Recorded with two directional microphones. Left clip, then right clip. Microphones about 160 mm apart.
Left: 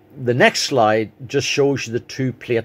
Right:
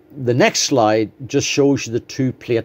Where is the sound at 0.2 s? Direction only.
30° right (ahead or behind).